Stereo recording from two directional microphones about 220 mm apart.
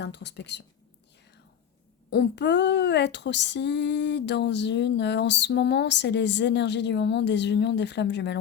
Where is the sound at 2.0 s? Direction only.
50° left (ahead or behind).